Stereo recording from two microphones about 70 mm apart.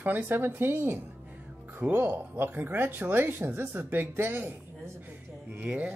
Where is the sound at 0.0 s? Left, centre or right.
Right.